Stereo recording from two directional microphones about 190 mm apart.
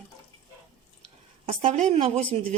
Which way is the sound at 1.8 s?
35° right (ahead or behind).